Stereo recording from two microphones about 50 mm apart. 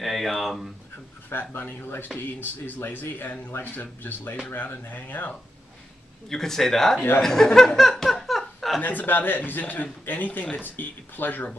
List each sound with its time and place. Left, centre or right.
0.0 s speech: centre
1.3 s speech: left
6.2 s speech: centre
7.5 s laughter: centre
8.8 s speech: left